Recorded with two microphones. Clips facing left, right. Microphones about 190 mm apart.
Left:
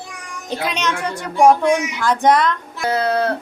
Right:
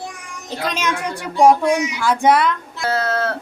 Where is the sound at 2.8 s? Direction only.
15° left (ahead or behind).